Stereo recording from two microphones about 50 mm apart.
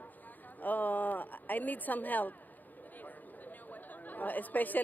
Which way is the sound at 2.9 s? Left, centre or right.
Left.